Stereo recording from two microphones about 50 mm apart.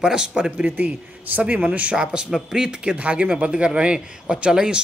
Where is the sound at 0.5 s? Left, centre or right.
Right.